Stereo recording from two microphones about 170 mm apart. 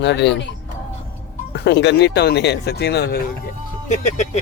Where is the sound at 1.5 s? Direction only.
85° left.